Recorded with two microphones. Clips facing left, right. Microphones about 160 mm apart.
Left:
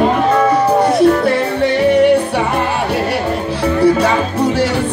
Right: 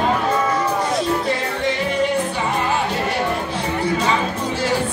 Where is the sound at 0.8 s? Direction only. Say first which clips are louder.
Left 10 dB; 65° left (ahead or behind).